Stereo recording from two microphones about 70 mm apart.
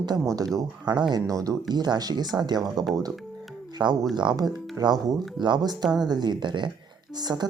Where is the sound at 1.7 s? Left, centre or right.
Right.